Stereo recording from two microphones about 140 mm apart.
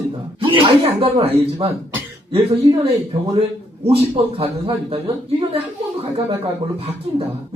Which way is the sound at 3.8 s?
45° right (ahead or behind).